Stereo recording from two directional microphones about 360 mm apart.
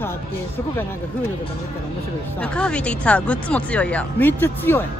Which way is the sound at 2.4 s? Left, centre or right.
Centre.